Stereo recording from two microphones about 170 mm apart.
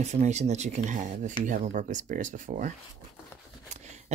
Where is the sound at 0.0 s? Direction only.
40° right (ahead or behind).